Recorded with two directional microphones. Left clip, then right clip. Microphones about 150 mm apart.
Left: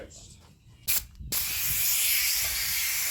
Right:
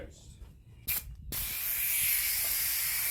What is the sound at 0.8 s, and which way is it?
Spray, 40° left (ahead or behind).